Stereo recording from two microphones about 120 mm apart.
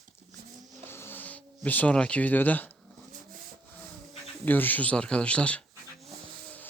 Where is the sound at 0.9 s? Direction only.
20° left (ahead or behind).